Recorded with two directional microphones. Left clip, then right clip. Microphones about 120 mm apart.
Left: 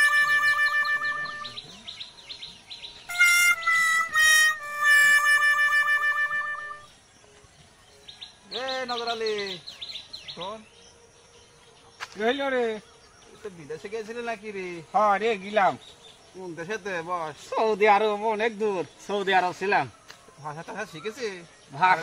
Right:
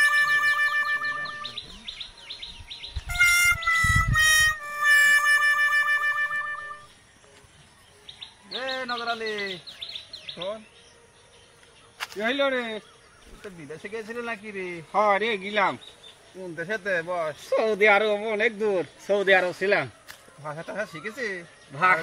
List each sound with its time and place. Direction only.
0.0 s music: centre (ahead or behind)
3.1 s music: centre (ahead or behind)
8.5 s a sound: centre (ahead or behind)
12.3 s speech: 55° left (ahead or behind)
13.7 s speech: 10° left (ahead or behind)
14.9 s speech: 60° left (ahead or behind)
16.5 s speech: centre (ahead or behind)
18.2 s speech: 20° left (ahead or behind)